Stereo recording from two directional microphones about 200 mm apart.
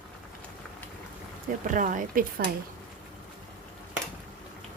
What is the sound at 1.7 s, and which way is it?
Speech, 40° right (ahead or behind).